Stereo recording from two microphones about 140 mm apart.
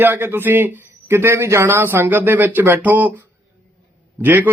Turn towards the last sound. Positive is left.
turn(degrees=-15)  # may be behind; listen again after turning